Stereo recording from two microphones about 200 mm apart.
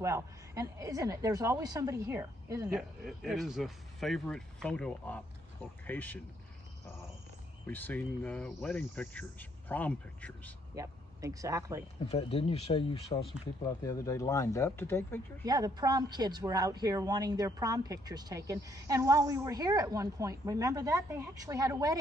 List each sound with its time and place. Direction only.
0.0 s a woman's voice: 15° right (ahead or behind)
2.7 s speech: centre (ahead or behind)
5.9 s cricket: 10° left (ahead or behind)
7.6 s cricket: 10° left (ahead or behind)
10.7 s speech: 15° right (ahead or behind)
12.1 s speech: 30° left (ahead or behind)
13.7 s cricket: 15° left (ahead or behind)
15.4 s a woman's voice: 20° right (ahead or behind)